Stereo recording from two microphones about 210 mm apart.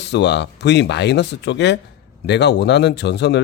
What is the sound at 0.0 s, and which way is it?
Speech, 55° left (ahead or behind).